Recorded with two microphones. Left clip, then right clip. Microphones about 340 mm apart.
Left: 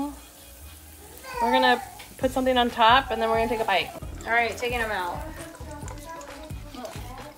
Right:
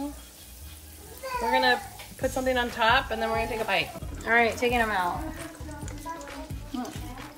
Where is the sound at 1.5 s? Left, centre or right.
Centre.